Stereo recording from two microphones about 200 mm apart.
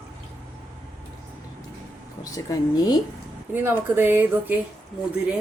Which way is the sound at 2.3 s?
15° left (ahead or behind).